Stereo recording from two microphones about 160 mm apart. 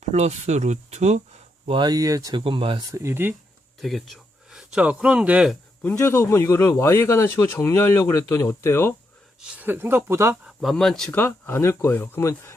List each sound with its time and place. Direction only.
0.1 s speech: 45° right (ahead or behind)
1.6 s speech: 30° right (ahead or behind)
2.4 s speech: 35° right (ahead or behind)
2.9 s speech: 15° right (ahead or behind)
3.8 s speech: centre (ahead or behind)
5.8 s speech: 15° left (ahead or behind)
9.6 s speech: 10° right (ahead or behind)
10.4 s speech: centre (ahead or behind); by 12.5 s 15° left (ahead or behind)